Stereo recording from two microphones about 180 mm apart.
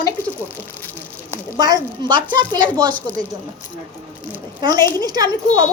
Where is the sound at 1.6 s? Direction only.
20° right (ahead or behind).